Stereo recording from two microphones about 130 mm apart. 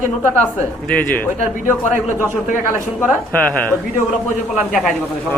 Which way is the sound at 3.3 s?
10° left (ahead or behind).